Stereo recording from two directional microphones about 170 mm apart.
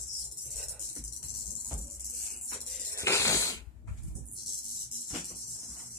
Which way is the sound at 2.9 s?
15° left (ahead or behind).